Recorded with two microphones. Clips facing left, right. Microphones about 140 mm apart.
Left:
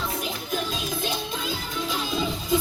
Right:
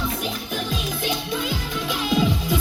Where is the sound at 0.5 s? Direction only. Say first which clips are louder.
Left 2 dB; 70° right (ahead or behind).